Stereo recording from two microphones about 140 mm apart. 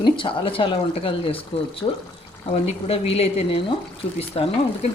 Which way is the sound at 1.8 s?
25° left (ahead or behind).